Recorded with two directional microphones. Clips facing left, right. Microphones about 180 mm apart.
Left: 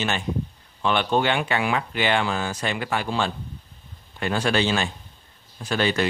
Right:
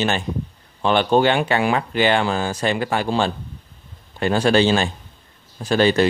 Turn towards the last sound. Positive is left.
turn(degrees=-35)  # may be behind; listen again after turning